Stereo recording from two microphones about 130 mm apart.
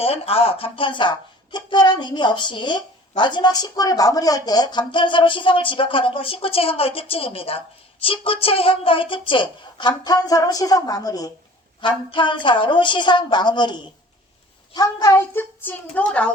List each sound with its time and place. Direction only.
0.0 s a woman's voice: 50° left (ahead or behind); by 16.3 s 10° left (ahead or behind)